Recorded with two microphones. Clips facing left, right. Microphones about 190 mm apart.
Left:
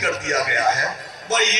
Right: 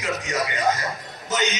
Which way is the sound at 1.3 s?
90° left.